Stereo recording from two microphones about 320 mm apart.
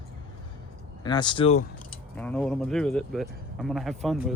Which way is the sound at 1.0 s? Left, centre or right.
Centre.